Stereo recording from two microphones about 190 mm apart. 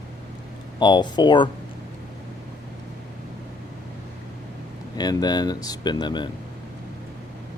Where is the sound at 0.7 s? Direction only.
25° left (ahead or behind).